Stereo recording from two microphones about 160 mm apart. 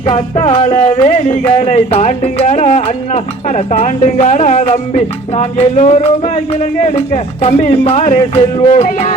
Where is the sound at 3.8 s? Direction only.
40° left (ahead or behind).